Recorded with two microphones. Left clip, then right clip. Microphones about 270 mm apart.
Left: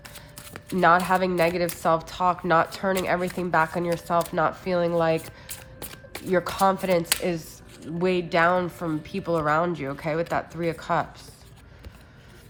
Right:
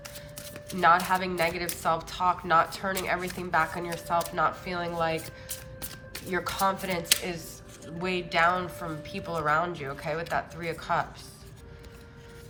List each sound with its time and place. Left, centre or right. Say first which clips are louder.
0.7 s speech: left 3 dB; left